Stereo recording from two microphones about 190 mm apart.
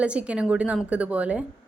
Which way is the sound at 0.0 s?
5° right (ahead or behind).